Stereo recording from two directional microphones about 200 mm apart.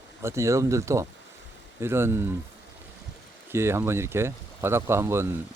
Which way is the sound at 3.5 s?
10° right (ahead or behind).